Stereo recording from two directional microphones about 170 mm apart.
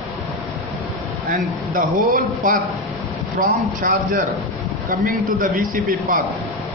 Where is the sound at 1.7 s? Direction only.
55° right (ahead or behind).